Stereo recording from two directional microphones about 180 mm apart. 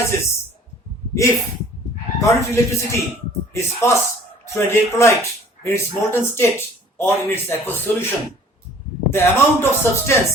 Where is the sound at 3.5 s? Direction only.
15° left (ahead or behind).